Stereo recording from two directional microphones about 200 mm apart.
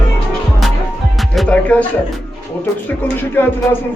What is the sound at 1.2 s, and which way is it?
Music, 5° left (ahead or behind).